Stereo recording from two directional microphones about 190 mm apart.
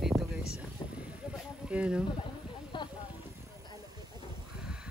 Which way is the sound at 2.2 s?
25° left (ahead or behind).